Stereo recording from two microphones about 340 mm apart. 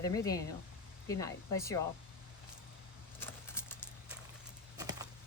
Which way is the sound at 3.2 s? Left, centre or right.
Centre.